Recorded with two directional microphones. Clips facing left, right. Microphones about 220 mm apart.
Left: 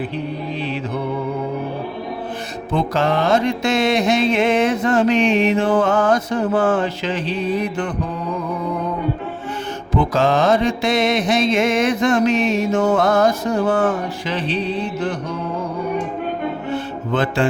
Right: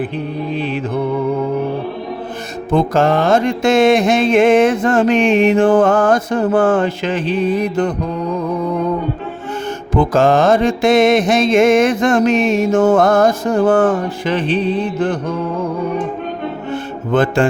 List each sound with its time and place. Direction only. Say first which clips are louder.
2.7 s music: right 5 dB; 45° right (ahead or behind)
9.9 s music: right 4 dB; 50° right (ahead or behind)
16.7 s mantra: right 7 dB; 50° right (ahead or behind)